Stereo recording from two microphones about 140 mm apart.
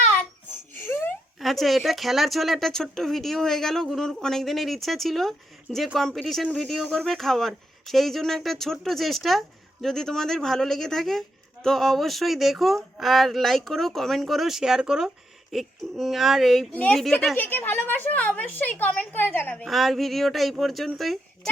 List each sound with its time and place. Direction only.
0.7 s laughter: 15° left (ahead or behind)
1.4 s a woman's voice: centre (ahead or behind)
19.6 s speech: centre (ahead or behind)